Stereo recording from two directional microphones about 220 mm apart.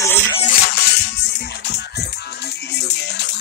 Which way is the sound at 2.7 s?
50° left (ahead or behind).